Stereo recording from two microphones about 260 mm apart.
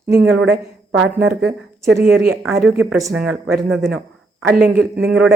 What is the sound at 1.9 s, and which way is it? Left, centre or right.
A woman's voice, centre.